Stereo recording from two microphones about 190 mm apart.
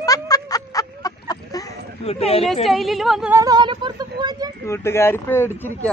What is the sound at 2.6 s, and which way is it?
Speech, centre (ahead or behind).